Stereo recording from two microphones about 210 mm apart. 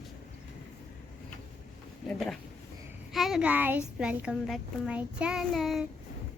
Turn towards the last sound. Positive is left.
turn(degrees=0)  # may be behind; listen again after turning